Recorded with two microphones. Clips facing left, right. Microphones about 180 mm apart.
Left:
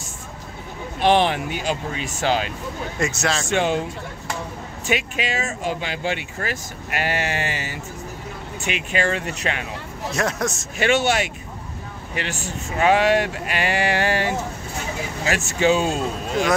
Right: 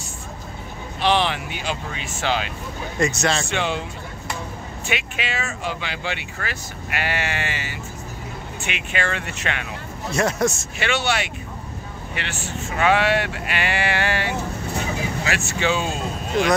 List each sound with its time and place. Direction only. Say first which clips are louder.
1.0 s speech: left 3 dB; 50° left (ahead or behind)
3.0 s a man's voice: right 3 dB; 5° left (ahead or behind)
3.4 s speech: left 4 dB; 45° left (ahead or behind)
4.8 s speech: left 4 dB; 40° left (ahead or behind)
10.1 s a man's voice: right 3 dB; centre (ahead or behind)
10.8 s speech: left 4 dB; 45° left (ahead or behind)